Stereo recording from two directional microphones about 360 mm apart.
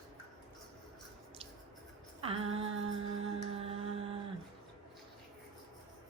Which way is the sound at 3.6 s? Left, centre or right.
Centre.